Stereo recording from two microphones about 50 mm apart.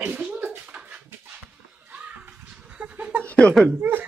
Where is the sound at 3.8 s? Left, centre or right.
Right.